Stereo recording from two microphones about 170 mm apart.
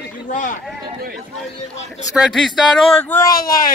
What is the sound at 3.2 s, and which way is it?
Speech, 60° left (ahead or behind).